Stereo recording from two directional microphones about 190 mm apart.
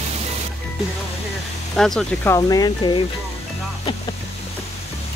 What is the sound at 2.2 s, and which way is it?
Speech, 20° left (ahead or behind).